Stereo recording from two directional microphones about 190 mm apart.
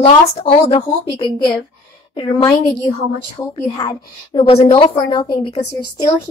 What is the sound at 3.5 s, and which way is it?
Speech, 20° left (ahead or behind).